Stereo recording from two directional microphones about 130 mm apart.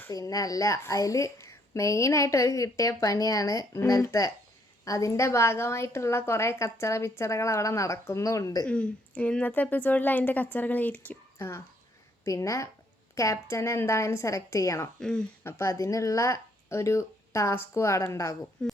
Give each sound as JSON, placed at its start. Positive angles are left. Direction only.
{"t": 0.1, "sound": "a woman's voice", "side_deg": 25}
{"t": 8.6, "sound": "a woman's voice", "side_deg": 10}
{"t": 14.9, "sound": "speech", "side_deg": 5}
{"t": 15.4, "sound": "a woman's voice", "side_deg": 20}
{"t": 18.6, "sound": "speech", "side_deg": 5}